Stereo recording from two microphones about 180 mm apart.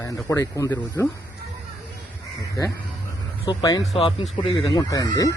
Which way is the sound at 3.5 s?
20° left (ahead or behind).